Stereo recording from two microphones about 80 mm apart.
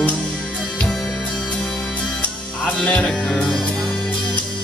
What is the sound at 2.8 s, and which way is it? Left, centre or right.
Music, centre.